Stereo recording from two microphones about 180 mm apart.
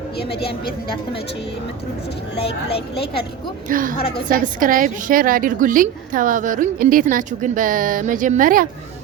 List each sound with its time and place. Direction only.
0.2 s a woman's voice: 65° left (ahead or behind)
2.6 s a woman's voice: 30° left (ahead or behind)
3.7 s a woman's voice: 50° right (ahead or behind)